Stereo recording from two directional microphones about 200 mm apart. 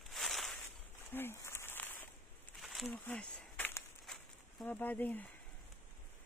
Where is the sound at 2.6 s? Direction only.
Centre (ahead or behind).